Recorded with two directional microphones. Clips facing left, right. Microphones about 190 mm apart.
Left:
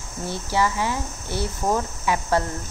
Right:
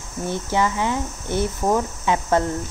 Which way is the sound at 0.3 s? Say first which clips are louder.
Right 1 dB; 20° right (ahead or behind).